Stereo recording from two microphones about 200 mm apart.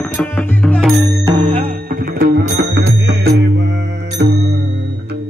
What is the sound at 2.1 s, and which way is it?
Music, 55° right (ahead or behind).